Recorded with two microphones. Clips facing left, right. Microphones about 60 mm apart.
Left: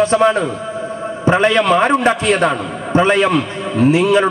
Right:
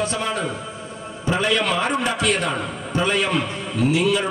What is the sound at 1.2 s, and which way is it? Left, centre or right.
A man's voice, left.